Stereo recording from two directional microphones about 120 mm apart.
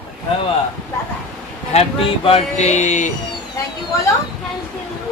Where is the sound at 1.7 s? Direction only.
50° left (ahead or behind).